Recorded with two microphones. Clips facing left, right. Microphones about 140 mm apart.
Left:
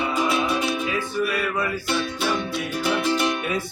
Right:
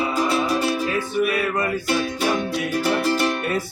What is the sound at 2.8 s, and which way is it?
Music, 40° right (ahead or behind).